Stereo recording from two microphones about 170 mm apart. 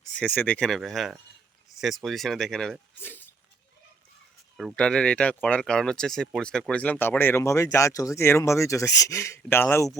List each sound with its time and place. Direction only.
0.0 s speech: 5° left (ahead or behind)
4.5 s speech: 5° left (ahead or behind)